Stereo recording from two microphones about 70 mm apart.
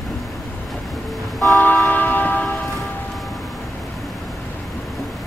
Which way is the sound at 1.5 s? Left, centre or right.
Left.